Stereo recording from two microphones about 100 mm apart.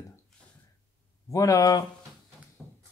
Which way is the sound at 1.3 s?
35° left (ahead or behind).